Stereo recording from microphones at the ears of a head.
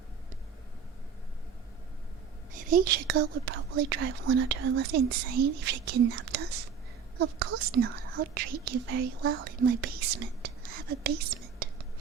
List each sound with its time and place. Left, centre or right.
2.5 s speech: right